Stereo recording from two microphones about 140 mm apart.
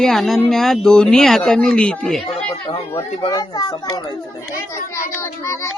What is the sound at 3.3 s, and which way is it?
Speech, 25° left (ahead or behind).